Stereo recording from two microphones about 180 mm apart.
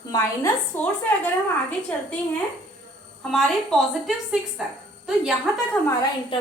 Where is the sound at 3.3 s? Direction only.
Centre (ahead or behind).